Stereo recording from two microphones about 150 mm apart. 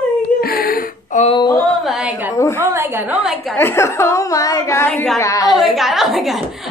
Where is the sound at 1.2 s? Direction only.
30° left (ahead or behind).